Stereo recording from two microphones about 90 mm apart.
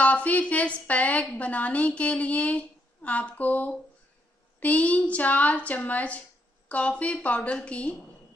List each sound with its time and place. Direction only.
0.0 s a woman's voice: 15° left (ahead or behind)